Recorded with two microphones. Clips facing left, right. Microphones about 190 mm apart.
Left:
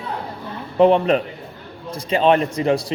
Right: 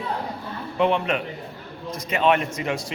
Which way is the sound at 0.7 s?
35° left (ahead or behind).